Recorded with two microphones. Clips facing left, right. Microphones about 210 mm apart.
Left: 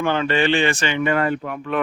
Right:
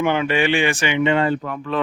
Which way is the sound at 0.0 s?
15° right (ahead or behind).